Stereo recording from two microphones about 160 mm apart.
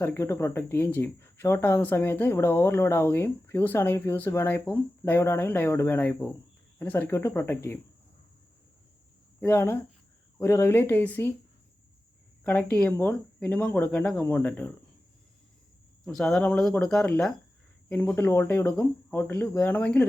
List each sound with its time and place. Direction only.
0.0 s speech: 15° left (ahead or behind)
9.4 s speech: 15° left (ahead or behind)
12.7 s speech: 10° left (ahead or behind)
16.0 s speech: 5° left (ahead or behind)